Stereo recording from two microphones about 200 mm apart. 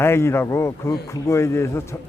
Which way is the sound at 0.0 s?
10° left (ahead or behind).